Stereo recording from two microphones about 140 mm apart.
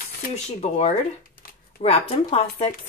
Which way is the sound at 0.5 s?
50° left (ahead or behind).